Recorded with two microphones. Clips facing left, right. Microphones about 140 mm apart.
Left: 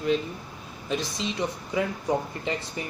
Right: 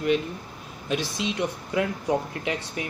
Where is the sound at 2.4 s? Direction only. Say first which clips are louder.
Right 1 dB; 70° right (ahead or behind).